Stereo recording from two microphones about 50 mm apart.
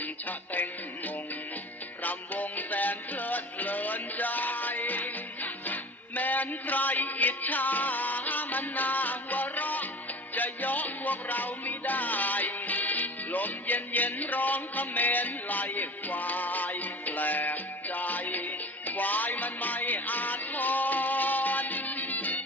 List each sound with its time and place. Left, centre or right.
0.0 s music: left